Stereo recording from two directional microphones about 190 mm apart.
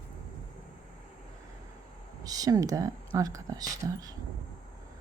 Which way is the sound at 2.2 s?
20° right (ahead or behind).